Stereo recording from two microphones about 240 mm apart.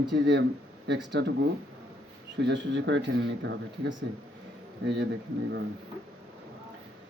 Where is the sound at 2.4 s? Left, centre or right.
Right.